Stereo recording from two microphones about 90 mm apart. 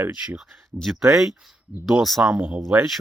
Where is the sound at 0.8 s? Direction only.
Centre (ahead or behind).